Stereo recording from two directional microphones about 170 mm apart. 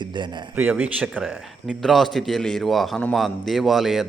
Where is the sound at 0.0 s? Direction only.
25° right (ahead or behind).